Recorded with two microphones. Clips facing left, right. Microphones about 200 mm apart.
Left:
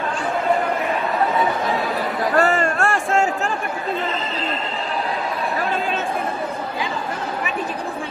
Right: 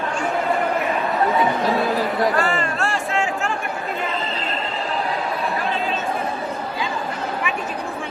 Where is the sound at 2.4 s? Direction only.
40° left (ahead or behind).